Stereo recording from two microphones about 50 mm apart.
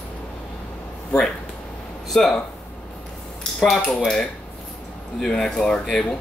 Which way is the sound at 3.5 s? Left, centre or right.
Centre.